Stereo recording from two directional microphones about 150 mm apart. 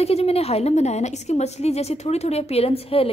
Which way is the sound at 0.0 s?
45° left (ahead or behind).